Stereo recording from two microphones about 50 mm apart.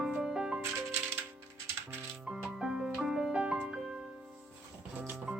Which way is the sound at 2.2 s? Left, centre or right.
Centre.